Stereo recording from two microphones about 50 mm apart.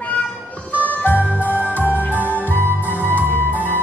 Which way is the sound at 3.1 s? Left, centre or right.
Left.